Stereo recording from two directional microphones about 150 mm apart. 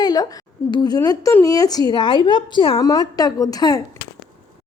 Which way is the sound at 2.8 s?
25° left (ahead or behind).